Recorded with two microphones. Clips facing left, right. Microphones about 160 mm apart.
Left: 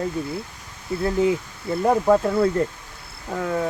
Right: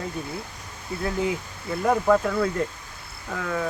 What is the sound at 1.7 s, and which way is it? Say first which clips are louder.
Speech: left 3 dB; 30° left (ahead or behind).